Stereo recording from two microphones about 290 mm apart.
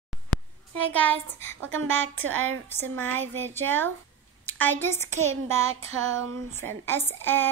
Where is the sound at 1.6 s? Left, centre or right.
Right.